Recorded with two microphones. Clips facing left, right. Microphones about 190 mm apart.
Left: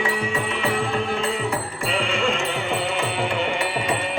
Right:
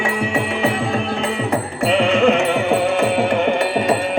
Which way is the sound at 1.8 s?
65° right (ahead or behind).